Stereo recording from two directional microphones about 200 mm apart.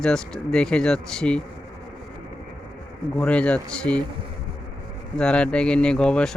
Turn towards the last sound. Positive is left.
turn(degrees=5)  # may be behind; listen again after turning